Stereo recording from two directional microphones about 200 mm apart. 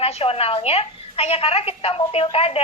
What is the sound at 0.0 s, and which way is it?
A woman's voice, 30° left (ahead or behind).